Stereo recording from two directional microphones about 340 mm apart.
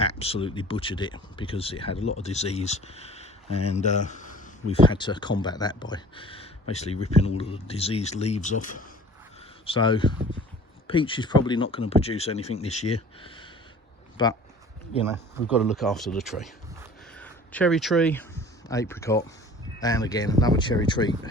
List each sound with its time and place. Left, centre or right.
0.0 s speech: centre
15.0 s speech: centre